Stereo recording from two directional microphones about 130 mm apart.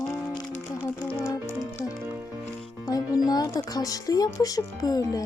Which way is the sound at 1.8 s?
30° left (ahead or behind).